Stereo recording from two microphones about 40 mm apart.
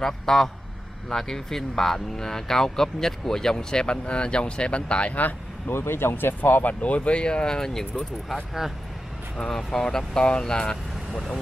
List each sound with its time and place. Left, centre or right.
0.0 s speech: centre; by 5.1 s left
5.7 s speech: left
6.6 s speech: left; by 7.8 s centre
9.4 s speech: centre